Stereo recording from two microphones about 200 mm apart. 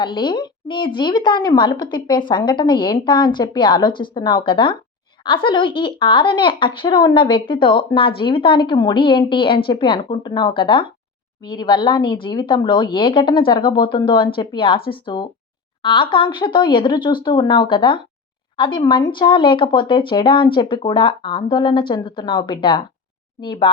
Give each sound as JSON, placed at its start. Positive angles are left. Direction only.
{"t": 0.0, "sound": "a woman's voice", "side_deg": 25}